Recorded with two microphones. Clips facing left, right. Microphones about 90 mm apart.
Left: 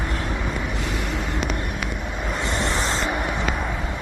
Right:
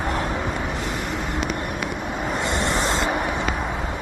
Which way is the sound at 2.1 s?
15° right (ahead or behind).